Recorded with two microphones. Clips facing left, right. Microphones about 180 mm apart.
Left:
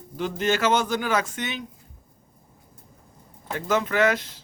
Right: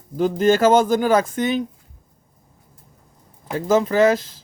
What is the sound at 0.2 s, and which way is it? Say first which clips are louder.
Speech: right 8 dB; 40° right (ahead or behind).